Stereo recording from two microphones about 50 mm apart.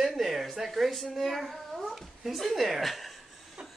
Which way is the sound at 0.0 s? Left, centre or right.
Centre.